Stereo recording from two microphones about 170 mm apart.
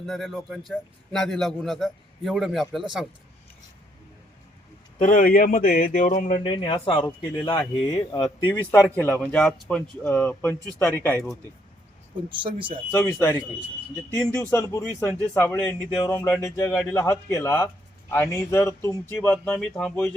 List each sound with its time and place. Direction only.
0.0 s a man's voice: centre (ahead or behind)
4.9 s speech: 50° left (ahead or behind)
6.4 s speech: 30° left (ahead or behind)
9.0 s speech: 5° left (ahead or behind)
12.3 s speech: 30° right (ahead or behind)
12.9 s speech: 15° left (ahead or behind)